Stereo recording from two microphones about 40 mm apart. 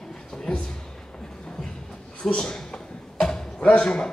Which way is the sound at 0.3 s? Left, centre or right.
Centre.